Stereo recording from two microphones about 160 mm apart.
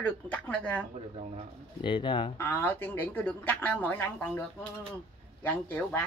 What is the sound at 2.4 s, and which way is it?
Speech, 15° left (ahead or behind).